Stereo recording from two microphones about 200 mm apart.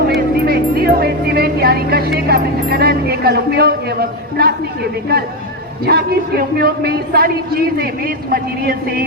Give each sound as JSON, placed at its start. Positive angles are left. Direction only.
{"t": 0.1, "sound": "a man's voice", "side_deg": -50}